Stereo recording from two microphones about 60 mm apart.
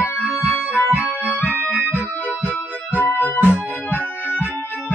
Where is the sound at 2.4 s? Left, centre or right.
Left.